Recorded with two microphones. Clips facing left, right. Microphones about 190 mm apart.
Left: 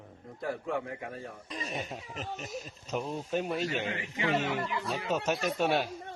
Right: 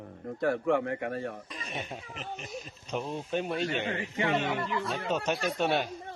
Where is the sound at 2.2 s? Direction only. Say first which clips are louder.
Left 3 dB; 45° left (ahead or behind).